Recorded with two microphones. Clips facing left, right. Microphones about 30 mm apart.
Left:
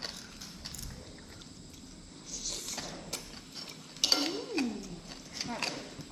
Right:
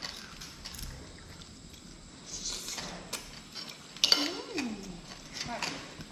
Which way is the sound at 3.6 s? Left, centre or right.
Right.